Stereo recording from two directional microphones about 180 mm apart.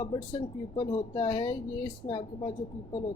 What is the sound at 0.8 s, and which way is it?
Speech, 25° left (ahead or behind).